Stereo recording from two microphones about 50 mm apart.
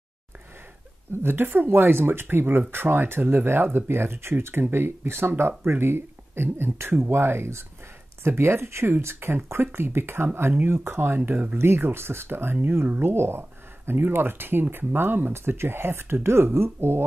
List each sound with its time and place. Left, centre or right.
1.2 s speech: right